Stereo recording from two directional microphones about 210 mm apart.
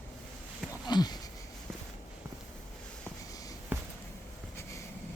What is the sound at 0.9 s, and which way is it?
Sniff, 20° left (ahead or behind).